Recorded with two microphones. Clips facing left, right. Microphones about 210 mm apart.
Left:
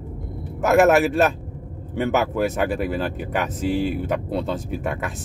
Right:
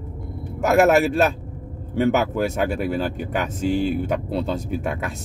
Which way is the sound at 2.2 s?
Centre (ahead or behind).